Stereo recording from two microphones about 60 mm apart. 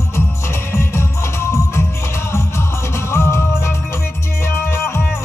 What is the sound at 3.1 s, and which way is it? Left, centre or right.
Music, left.